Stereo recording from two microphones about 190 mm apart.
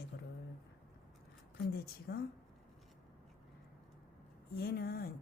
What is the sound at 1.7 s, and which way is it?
Speech, 55° left (ahead or behind).